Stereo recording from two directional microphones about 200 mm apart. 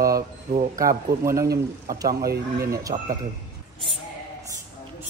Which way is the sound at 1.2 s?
15° right (ahead or behind).